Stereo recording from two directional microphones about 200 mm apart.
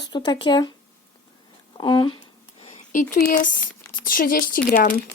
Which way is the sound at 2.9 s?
40° left (ahead or behind).